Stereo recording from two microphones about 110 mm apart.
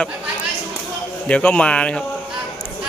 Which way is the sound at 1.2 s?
10° left (ahead or behind).